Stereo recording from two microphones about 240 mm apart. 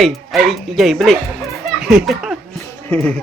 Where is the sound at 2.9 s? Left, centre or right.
Centre.